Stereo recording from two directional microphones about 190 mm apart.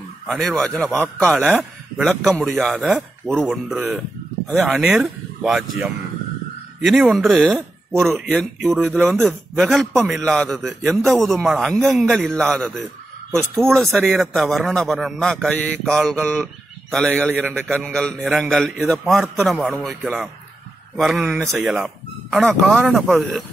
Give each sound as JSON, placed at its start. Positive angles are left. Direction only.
{"t": 0.3, "sound": "a man's voice", "side_deg": 0}